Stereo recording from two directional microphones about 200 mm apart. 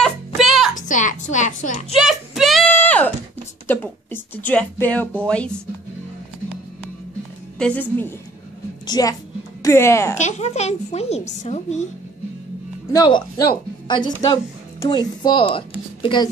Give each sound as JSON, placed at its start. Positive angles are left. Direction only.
{"t": 0.0, "sound": "music", "side_deg": 0}
{"t": 0.7, "sound": "a sound", "side_deg": 40}
{"t": 2.0, "sound": "a sound", "side_deg": 0}
{"t": 3.6, "sound": "speech", "side_deg": 10}
{"t": 7.5, "sound": "a woman's voice", "side_deg": 5}
{"t": 8.8, "sound": "a woman's voice", "side_deg": 20}
{"t": 10.1, "sound": "speech", "side_deg": 35}
{"t": 12.9, "sound": "speech", "side_deg": 20}